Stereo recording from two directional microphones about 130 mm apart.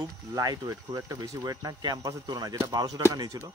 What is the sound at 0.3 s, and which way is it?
Speech, 30° right (ahead or behind).